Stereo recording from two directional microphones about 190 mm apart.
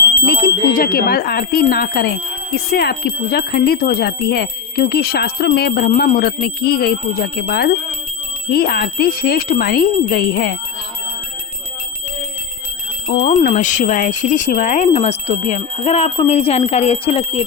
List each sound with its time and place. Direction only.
0.3 s speech: 55° left (ahead or behind)
13.1 s speech: 40° left (ahead or behind)